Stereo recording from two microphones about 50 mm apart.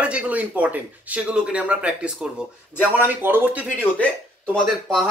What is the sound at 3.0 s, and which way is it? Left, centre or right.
Speech, right.